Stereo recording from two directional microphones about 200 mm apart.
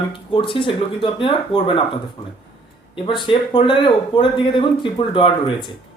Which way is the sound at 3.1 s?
25° left (ahead or behind).